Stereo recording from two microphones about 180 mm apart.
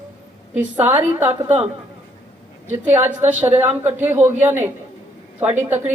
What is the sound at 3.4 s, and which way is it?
Speech, 10° right (ahead or behind).